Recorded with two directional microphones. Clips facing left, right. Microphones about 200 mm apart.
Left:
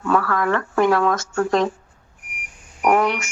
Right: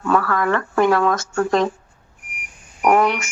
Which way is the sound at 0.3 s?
65° right (ahead or behind).